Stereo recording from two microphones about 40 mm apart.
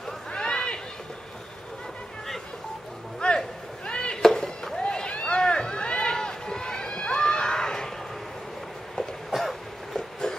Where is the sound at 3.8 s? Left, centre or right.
Left.